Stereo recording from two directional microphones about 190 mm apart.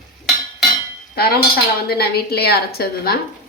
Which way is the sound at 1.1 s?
55° left (ahead or behind).